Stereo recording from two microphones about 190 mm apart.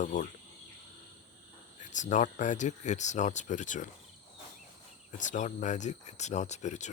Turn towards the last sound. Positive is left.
turn(degrees=40)  # may be behind; listen again after turning